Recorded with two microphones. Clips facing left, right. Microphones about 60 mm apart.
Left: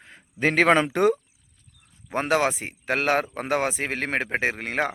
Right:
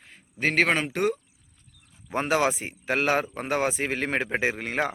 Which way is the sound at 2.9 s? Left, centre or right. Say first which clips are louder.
Left 1 dB; left.